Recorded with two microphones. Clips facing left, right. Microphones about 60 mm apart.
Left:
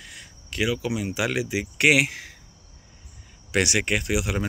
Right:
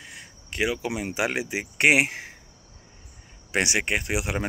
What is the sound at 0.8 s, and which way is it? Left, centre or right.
Speech, right.